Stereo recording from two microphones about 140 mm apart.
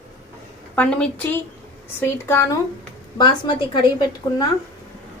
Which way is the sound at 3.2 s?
30° left (ahead or behind).